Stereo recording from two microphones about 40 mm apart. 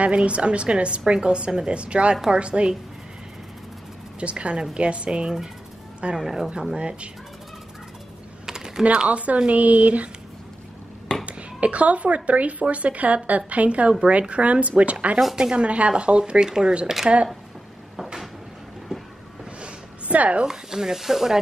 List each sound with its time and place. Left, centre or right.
0.0 s a woman's voice: right
4.2 s a woman's voice: right; by 6.5 s centre
6.7 s a woman's voice: right
8.5 s typing: centre
8.9 s a woman's voice: right
11.2 s a woman's voice: right
15.3 s a woman's voice: right
18.9 s train: centre
19.6 s a sound: right
20.4 s speech: centre